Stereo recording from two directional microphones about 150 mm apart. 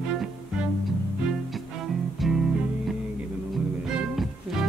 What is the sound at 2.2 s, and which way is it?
Music, centre (ahead or behind).